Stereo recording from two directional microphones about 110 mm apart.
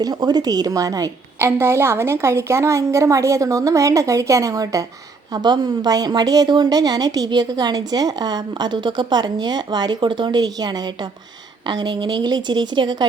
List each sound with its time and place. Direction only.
0.0 s a woman's voice: 35° right (ahead or behind)